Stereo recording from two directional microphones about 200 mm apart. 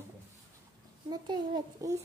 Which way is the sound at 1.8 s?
15° right (ahead or behind).